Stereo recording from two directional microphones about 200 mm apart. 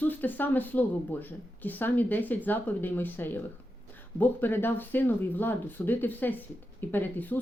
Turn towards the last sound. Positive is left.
turn(degrees=10)  # may be behind; listen again after turning